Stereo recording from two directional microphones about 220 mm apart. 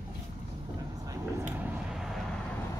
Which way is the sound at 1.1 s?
10° right (ahead or behind).